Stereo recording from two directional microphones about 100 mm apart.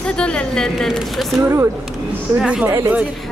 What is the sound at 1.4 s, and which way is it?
Speech, 25° right (ahead or behind).